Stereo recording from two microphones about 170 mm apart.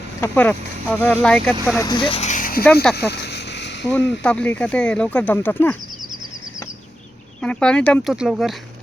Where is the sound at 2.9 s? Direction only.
75° left (ahead or behind); by 3.9 s 90° left.